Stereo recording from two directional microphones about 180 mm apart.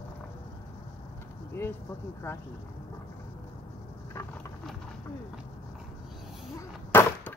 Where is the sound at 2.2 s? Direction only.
15° left (ahead or behind).